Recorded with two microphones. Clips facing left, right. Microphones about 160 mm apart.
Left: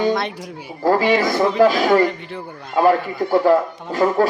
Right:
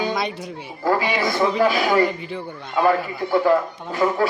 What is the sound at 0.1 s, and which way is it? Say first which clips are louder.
Speech: left 3 dB; centre (ahead or behind).